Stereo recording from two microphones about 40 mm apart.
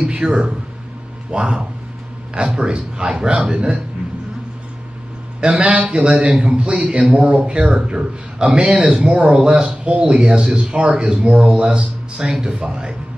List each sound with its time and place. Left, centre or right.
0.2 s speech: right
5.4 s a man's voice: right